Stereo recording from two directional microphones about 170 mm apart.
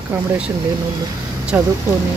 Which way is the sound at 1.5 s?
10° right (ahead or behind).